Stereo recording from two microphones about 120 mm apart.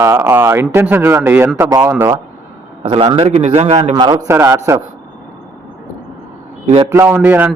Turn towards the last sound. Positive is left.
turn(degrees=-15)  # may be behind; listen again after turning